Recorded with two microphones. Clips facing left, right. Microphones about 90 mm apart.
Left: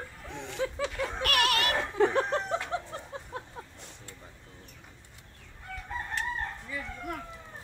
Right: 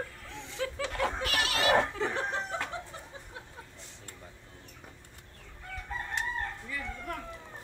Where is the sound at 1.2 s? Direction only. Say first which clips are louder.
Left 4 dB; 60° left (ahead or behind).